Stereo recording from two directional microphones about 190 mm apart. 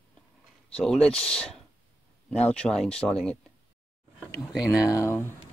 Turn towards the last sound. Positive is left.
turn(degrees=10)  # may be behind; listen again after turning